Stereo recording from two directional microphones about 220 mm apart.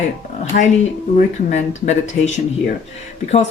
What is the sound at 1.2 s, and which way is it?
Speech, 30° left (ahead or behind).